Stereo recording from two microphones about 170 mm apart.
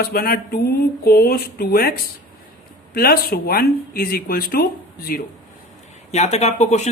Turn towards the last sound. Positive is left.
turn(degrees=40)  # may be behind; listen again after turning